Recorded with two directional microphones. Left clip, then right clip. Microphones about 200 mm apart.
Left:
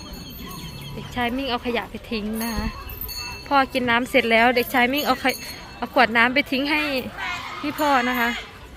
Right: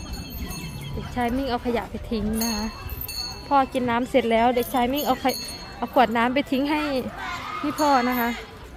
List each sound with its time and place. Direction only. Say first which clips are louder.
1.1 s speech: left 1 dB; 10° right (ahead or behind)